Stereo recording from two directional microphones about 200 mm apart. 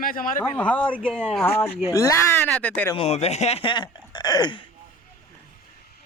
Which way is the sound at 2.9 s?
30° left (ahead or behind).